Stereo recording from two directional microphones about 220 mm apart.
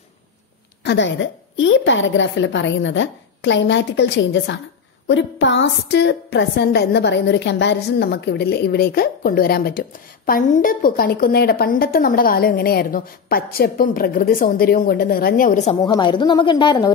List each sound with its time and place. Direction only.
0.8 s a woman's voice: 55° left (ahead or behind); by 15.7 s 35° left (ahead or behind)
15.7 s a woman's voice: 20° left (ahead or behind)